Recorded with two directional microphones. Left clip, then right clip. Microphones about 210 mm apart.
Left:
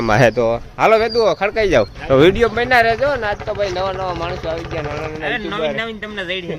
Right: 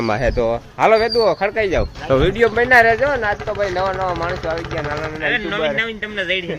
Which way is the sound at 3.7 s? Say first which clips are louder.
Right 1 dB; 25° right (ahead or behind).